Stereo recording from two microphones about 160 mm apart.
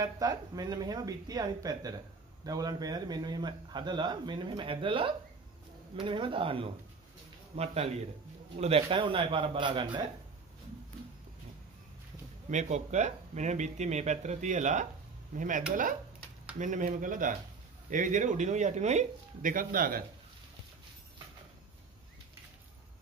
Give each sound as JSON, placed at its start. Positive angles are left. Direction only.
{"t": 0.0, "sound": "a man's voice", "side_deg": -25}
{"t": 12.4, "sound": "speech", "side_deg": -45}